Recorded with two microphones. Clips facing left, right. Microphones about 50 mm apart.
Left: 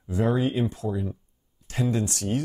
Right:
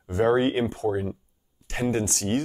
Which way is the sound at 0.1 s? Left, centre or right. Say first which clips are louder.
Right 3 dB; right.